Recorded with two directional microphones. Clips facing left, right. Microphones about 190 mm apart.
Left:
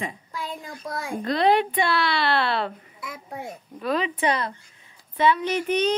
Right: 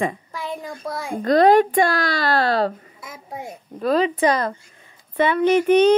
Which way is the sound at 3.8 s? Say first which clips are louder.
Right 6 dB; 40° right (ahead or behind).